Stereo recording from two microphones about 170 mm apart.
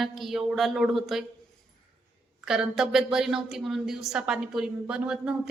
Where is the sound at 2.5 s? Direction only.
5° right (ahead or behind).